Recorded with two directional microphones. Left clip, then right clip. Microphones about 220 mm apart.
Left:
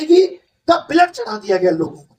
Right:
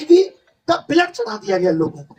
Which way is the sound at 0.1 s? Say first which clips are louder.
Even; 30° left (ahead or behind).